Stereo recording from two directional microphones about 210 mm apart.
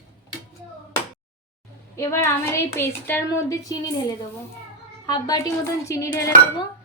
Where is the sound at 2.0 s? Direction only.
15° left (ahead or behind).